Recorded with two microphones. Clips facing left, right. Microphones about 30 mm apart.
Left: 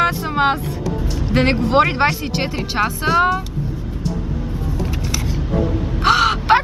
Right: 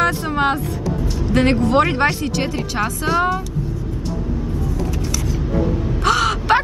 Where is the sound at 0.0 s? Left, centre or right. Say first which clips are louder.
Left 1 dB; centre.